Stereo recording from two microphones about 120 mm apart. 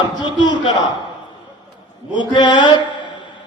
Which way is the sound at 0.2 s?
40° left (ahead or behind).